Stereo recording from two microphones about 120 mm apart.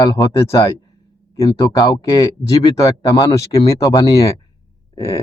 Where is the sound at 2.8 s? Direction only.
30° left (ahead or behind).